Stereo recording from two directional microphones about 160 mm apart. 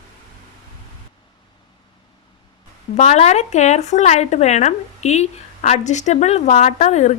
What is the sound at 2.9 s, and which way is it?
Speech, 45° left (ahead or behind).